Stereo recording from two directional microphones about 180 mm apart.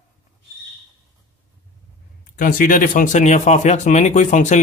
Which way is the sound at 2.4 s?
50° left (ahead or behind).